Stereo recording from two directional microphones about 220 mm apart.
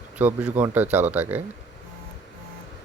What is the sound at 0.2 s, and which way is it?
Speech, 10° right (ahead or behind).